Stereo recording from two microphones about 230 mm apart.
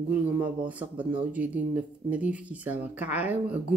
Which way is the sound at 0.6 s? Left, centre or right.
Right.